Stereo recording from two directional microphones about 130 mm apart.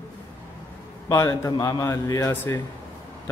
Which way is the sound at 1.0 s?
25° left (ahead or behind).